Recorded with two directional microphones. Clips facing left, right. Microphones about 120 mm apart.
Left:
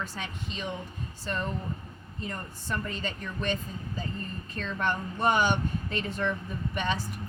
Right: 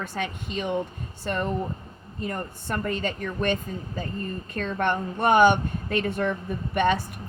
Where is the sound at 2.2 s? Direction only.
60° right (ahead or behind).